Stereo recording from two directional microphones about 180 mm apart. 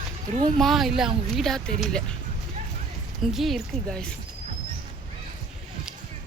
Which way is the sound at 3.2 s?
Centre (ahead or behind).